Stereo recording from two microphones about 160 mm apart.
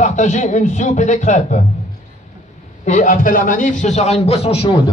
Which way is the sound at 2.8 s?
50° left (ahead or behind).